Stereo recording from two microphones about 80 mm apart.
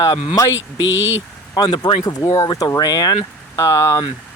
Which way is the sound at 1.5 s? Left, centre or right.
Left.